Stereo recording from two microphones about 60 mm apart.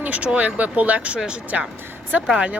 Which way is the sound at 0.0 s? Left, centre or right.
Right.